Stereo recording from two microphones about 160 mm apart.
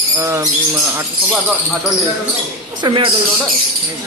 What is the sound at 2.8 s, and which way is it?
Speech, 30° right (ahead or behind).